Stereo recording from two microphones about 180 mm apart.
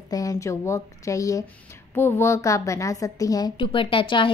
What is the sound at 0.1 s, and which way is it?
A woman's voice, 20° left (ahead or behind).